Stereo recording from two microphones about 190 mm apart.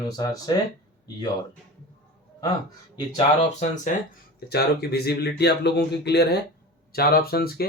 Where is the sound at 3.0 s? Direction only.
35° left (ahead or behind).